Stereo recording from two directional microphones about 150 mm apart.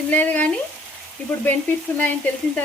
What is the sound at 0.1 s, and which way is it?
Frying, 10° left (ahead or behind).